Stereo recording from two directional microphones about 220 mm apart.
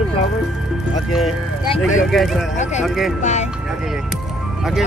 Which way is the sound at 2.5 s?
30° left (ahead or behind).